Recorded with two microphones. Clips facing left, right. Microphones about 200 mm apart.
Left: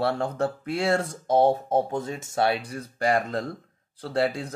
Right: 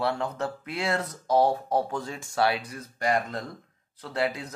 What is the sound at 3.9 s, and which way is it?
Speech, 30° left (ahead or behind).